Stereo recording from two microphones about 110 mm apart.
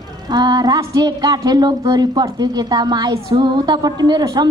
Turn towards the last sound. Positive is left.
turn(degrees=-40)  # may be behind; listen again after turning